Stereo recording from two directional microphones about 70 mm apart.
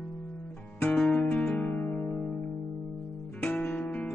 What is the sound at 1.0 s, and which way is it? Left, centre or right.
Music, centre.